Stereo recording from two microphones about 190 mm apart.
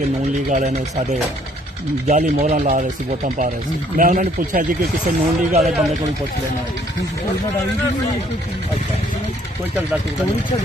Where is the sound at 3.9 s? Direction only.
45° right (ahead or behind).